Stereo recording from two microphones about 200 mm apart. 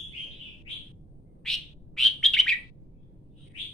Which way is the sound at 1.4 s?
Centre (ahead or behind).